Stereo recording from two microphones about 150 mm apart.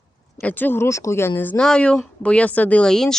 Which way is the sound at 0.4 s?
10° left (ahead or behind).